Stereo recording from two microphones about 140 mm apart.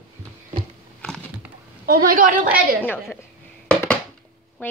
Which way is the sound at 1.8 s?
90° right.